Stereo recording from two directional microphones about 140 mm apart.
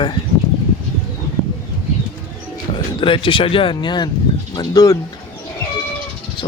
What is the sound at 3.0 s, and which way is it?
Speech, 40° left (ahead or behind).